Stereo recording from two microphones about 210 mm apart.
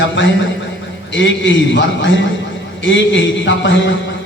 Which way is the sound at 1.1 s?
60° left (ahead or behind).